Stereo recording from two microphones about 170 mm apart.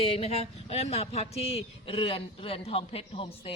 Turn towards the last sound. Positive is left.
turn(degrees=35)  # may be behind; listen again after turning